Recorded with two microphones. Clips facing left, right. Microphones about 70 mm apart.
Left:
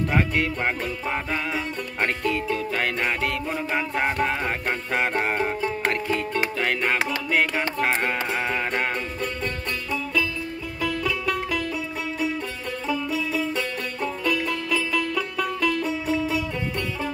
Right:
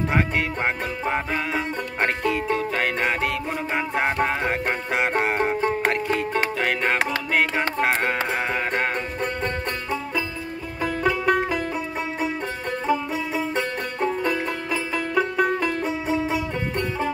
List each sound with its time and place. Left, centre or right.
1.3 s music: centre
6.6 s music: centre
10.8 s music: right
12.8 s music: right